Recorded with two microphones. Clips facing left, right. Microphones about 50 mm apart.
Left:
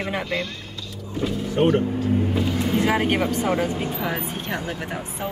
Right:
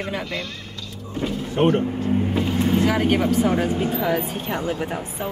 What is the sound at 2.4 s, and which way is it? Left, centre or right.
Vehicle, right.